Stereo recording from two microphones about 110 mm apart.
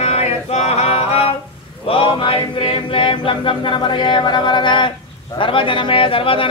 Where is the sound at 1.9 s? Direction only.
55° left (ahead or behind).